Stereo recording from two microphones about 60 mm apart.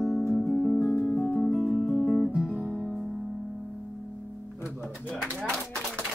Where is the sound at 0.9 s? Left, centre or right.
Left; by 2.3 s centre.